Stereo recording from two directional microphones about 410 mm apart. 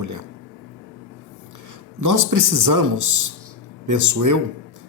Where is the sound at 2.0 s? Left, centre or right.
Right.